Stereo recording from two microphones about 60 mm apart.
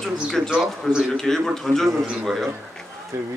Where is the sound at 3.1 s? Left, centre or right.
Right.